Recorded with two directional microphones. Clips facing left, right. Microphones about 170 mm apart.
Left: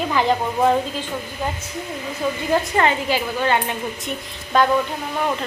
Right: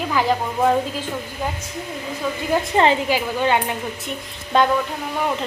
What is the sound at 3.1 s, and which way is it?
Speech, 15° right (ahead or behind).